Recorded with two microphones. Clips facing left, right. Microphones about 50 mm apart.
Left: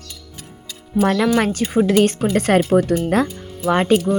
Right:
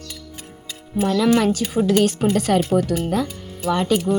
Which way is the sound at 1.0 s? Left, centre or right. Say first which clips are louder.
Left 3 dB; left.